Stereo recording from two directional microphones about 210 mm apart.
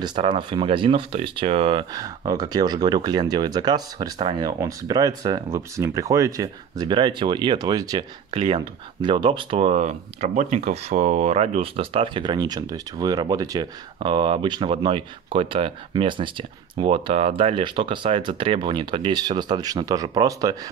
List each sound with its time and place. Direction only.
0.0 s speech: 20° right (ahead or behind)